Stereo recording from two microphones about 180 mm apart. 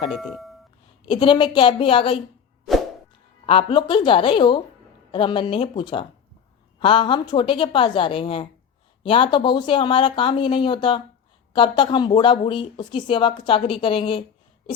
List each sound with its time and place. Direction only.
0.1 s speech: centre (ahead or behind)
1.0 s speech: 25° left (ahead or behind)
3.4 s speech: 30° left (ahead or behind)